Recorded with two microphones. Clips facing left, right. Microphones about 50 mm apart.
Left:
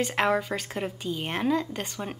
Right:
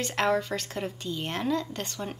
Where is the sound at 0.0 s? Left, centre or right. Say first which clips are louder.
Left 1 dB; centre.